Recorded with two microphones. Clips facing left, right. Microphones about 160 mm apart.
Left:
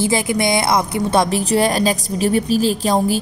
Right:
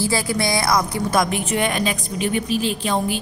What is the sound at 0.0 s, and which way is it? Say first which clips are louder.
A woman's voice: left 4 dB; 20° left (ahead or behind).